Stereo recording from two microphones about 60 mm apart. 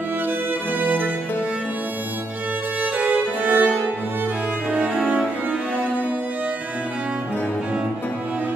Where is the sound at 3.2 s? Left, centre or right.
Right.